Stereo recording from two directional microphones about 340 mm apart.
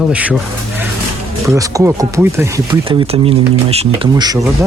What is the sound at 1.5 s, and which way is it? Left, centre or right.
Speech, centre.